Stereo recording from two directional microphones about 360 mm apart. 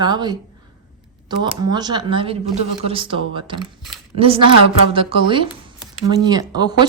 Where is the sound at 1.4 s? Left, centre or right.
Centre.